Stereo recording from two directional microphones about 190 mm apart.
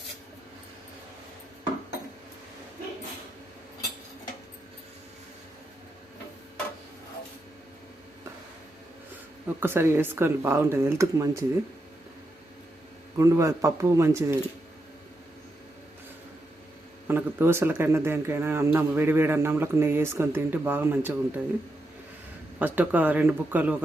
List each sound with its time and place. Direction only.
9.6 s speech: 10° right (ahead or behind)
13.1 s speech: 15° right (ahead or behind)
17.1 s speech: 10° right (ahead or behind)
22.5 s speech: 10° right (ahead or behind)